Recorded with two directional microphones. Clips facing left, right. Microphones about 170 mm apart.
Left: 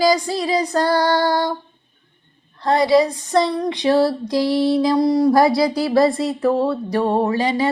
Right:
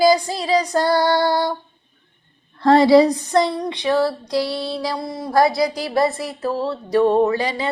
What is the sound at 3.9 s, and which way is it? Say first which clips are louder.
Music: left 3 dB; 30° left (ahead or behind).